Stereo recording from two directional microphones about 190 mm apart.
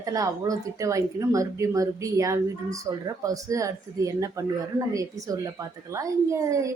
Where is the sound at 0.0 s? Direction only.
20° right (ahead or behind).